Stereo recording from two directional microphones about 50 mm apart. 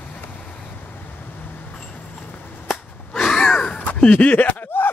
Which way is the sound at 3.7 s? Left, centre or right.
Left.